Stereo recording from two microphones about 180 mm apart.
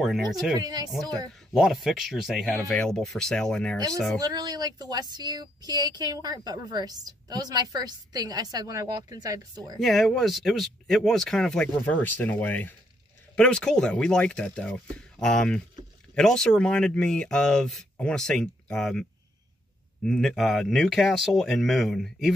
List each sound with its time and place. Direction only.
0.0 s speech: centre (ahead or behind)
0.6 s a woman's voice: 20° right (ahead or behind)
1.5 s speech: centre (ahead or behind)
4.2 s a woman's voice: 20° right (ahead or behind)
9.8 s speech: centre (ahead or behind)